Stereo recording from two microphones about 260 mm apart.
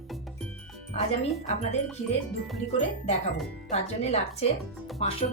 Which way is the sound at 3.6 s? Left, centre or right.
Left.